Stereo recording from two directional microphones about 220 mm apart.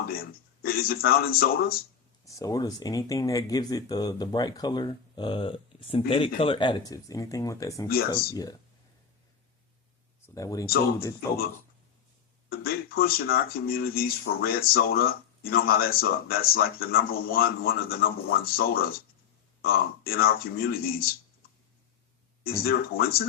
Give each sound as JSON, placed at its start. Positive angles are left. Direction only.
{"t": 0.1, "sound": "speech", "side_deg": 45}
{"t": 2.2, "sound": "speech", "side_deg": 15}
{"t": 10.3, "sound": "speech", "side_deg": 15}
{"t": 12.5, "sound": "speech", "side_deg": 45}
{"t": 22.6, "sound": "speech", "side_deg": 45}